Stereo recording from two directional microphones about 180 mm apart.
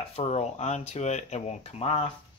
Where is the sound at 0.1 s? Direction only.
35° left (ahead or behind).